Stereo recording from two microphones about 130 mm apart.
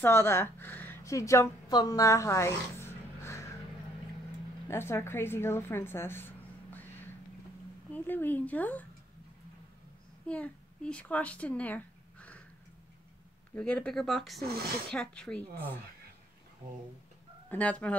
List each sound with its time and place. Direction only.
0.0 s speech: 20° left (ahead or behind)
4.6 s a woman's voice: 20° left (ahead or behind)
10.2 s speech: 10° left (ahead or behind)
13.6 s a woman's voice: 10° left (ahead or behind)
17.5 s a woman's voice: 10° left (ahead or behind)